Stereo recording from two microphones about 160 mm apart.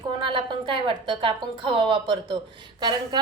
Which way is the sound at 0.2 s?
30° right (ahead or behind).